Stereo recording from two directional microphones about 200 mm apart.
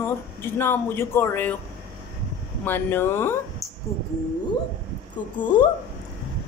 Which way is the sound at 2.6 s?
10° left (ahead or behind).